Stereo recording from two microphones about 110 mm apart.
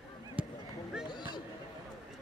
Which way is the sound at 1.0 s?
40° left (ahead or behind).